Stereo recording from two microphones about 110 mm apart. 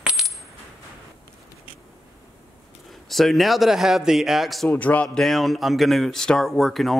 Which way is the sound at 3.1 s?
Centre (ahead or behind).